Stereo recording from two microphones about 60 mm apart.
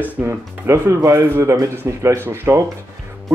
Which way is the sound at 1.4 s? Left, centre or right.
Right.